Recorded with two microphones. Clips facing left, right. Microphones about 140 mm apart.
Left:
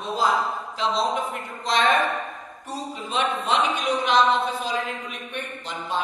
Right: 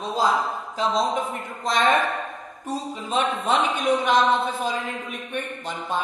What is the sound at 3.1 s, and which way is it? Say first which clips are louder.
A woman's voice: right 1 dB; 45° right (ahead or behind).